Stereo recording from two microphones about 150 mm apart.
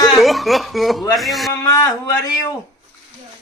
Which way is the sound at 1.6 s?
25° left (ahead or behind).